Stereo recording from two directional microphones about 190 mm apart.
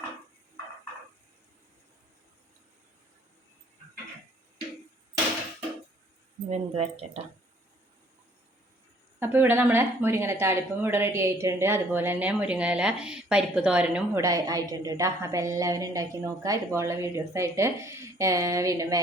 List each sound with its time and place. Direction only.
6.5 s speech: 35° right (ahead or behind)
9.1 s speech: 10° right (ahead or behind)